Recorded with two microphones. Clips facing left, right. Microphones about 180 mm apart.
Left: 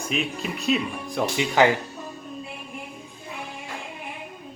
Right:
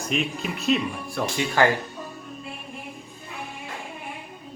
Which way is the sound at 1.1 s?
15° left (ahead or behind).